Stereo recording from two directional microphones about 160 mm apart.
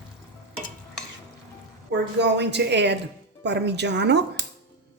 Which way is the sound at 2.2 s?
90° right.